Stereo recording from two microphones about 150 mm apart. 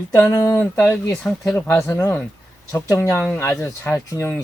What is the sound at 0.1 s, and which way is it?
Speech, 20° left (ahead or behind).